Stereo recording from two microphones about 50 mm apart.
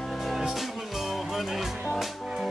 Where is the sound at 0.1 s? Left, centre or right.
Centre.